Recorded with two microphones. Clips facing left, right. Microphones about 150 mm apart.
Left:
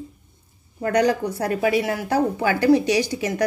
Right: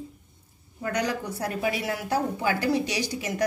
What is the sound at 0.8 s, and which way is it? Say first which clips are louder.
A woman's voice: left 9 dB; 60° left (ahead or behind).